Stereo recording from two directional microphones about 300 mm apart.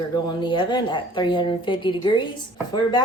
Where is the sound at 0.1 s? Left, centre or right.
Centre.